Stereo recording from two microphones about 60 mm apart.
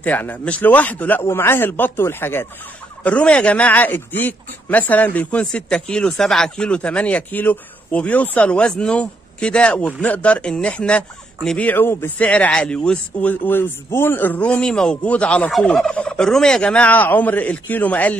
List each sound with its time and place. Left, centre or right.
0.0 s speech: left
1.2 s speech: left
3.0 s speech: left
11.5 s speech: left
12.2 s speech: left
13.5 s speech: left
14.6 s speech: centre